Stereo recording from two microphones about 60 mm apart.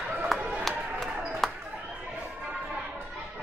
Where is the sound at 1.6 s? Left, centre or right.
Right.